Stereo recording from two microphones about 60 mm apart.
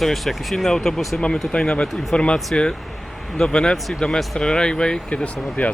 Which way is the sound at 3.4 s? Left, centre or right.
Centre.